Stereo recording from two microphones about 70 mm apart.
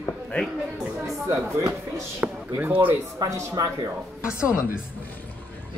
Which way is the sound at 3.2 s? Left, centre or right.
Right.